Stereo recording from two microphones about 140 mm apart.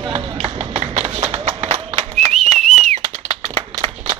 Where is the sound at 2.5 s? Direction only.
60° right (ahead or behind).